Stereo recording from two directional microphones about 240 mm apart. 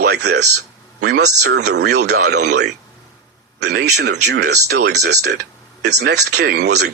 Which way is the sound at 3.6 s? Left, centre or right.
Right.